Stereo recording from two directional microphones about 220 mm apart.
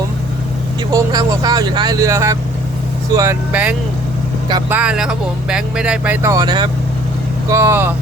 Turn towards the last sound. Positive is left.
turn(degrees=-10)  # may be behind; listen again after turning